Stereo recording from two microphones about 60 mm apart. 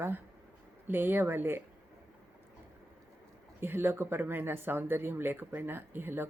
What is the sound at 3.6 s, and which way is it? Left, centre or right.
Speech, right.